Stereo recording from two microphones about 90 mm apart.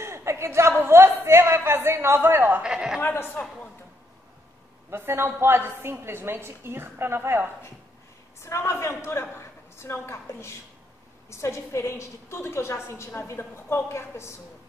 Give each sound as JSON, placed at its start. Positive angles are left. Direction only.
{"t": 0.0, "sound": "speech", "side_deg": -30}
{"t": 2.6, "sound": "a man's voice", "side_deg": -10}
{"t": 3.0, "sound": "a woman's voice", "side_deg": 25}
{"t": 4.9, "sound": "a woman's voice", "side_deg": -25}
{"t": 8.4, "sound": "a woman's voice", "side_deg": 30}